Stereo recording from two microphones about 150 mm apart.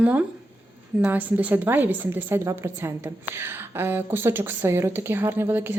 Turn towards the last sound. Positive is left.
turn(degrees=-15)  # may be behind; listen again after turning